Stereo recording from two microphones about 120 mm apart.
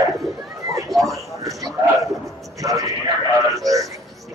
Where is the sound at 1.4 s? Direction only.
30° right (ahead or behind).